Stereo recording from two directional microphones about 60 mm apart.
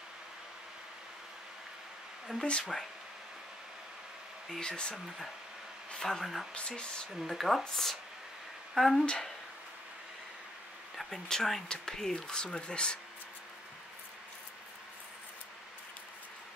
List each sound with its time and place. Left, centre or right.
2.3 s speech: centre
4.5 s speech: centre
4.9 s speech: centre
9.0 s speech: centre
11.0 s speech: centre